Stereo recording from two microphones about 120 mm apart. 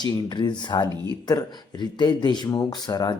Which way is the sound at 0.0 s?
40° left (ahead or behind).